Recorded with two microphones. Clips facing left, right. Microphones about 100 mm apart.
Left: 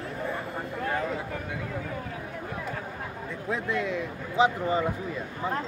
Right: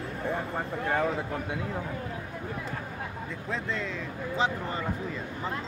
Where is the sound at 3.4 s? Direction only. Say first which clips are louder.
Left 5 dB; 15° left (ahead or behind).